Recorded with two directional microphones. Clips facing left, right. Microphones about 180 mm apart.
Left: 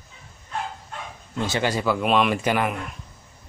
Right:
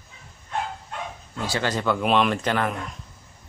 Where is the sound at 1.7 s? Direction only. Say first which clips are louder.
Right 1 dB; 5° left (ahead or behind).